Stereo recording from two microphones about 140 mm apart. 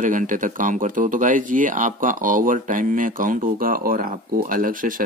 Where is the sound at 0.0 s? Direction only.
70° right (ahead or behind).